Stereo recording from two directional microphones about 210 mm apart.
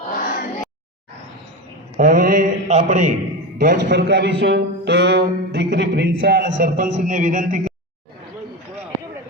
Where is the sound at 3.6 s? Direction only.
50° right (ahead or behind); by 7.7 s 35° right (ahead or behind).